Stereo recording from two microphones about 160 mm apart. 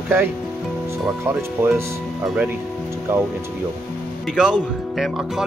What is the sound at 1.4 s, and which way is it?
Speech, 15° right (ahead or behind).